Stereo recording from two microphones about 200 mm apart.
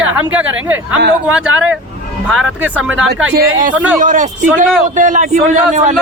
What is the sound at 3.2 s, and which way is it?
Speech, 85° right.